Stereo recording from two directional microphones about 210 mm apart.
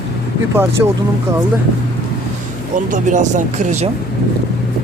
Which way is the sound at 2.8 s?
35° right (ahead or behind).